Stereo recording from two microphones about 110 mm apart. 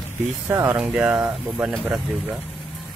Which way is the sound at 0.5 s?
25° right (ahead or behind).